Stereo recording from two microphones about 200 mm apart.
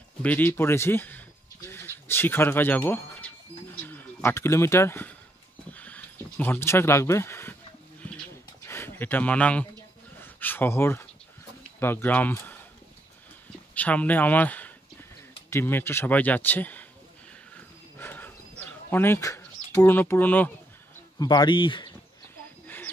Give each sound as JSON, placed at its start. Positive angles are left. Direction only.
{"t": 0.2, "sound": "speech", "side_deg": 10}
{"t": 8.6, "sound": "speech", "side_deg": 10}
{"t": 13.7, "sound": "speech", "side_deg": 5}
{"t": 17.9, "sound": "a sound", "side_deg": 10}
{"t": 18.6, "sound": "speech", "side_deg": 10}
{"t": 21.2, "sound": "speech", "side_deg": 20}